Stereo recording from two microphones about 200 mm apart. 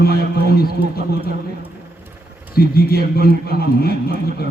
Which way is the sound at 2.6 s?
50° left (ahead or behind).